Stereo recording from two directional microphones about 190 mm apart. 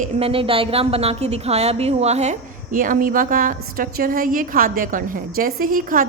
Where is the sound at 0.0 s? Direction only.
30° right (ahead or behind).